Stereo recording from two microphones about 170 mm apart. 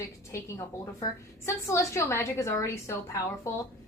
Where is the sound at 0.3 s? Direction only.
20° left (ahead or behind).